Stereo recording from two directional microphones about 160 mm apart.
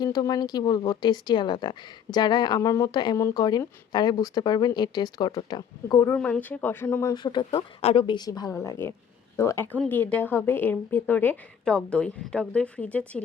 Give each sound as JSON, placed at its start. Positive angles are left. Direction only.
{"t": 0.0, "sound": "speech", "side_deg": 25}
{"t": 6.1, "sound": "a woman's voice", "side_deg": 5}
{"t": 7.1, "sound": "a woman's voice", "side_deg": 30}